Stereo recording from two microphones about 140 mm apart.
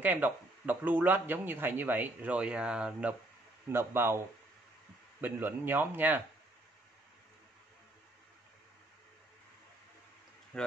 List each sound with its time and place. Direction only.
0.0 s speech: 15° right (ahead or behind)
5.2 s speech: 15° right (ahead or behind)
10.5 s speech: 5° left (ahead or behind)